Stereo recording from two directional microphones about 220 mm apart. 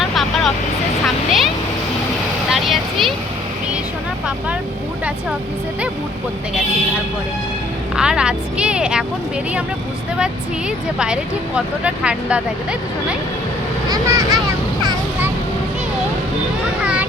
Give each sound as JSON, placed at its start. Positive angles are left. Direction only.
{"t": 0.1, "sound": "vehicle", "side_deg": 0}
{"t": 2.5, "sound": "vehicle", "side_deg": 0}
{"t": 7.9, "sound": "speech", "side_deg": -5}
{"t": 10.9, "sound": "speech", "side_deg": -5}
{"t": 13.9, "sound": "vehicle", "side_deg": -15}
{"t": 16.8, "sound": "a sound", "side_deg": -5}